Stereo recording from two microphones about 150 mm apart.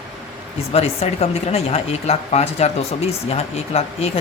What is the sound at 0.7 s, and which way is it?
Speech, 45° left (ahead or behind).